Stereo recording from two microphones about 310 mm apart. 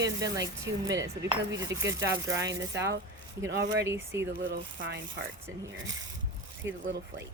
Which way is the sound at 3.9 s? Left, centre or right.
Centre.